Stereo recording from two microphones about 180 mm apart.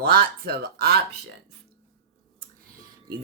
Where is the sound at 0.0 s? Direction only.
60° right (ahead or behind).